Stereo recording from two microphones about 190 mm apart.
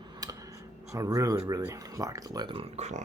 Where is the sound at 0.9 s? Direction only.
15° right (ahead or behind).